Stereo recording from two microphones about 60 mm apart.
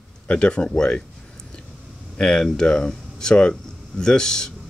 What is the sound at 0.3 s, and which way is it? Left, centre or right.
Speech, centre.